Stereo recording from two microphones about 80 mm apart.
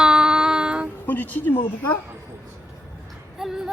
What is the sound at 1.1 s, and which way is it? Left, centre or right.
Speech, left.